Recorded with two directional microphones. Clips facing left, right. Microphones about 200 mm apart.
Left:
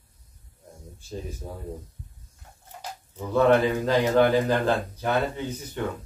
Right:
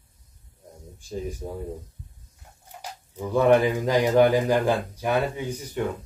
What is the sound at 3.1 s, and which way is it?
A man's voice, 15° right (ahead or behind).